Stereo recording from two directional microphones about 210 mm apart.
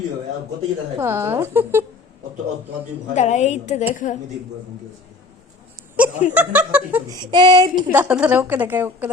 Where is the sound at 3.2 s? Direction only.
35° left (ahead or behind).